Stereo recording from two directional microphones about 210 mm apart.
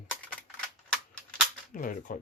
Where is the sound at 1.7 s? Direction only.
40° left (ahead or behind).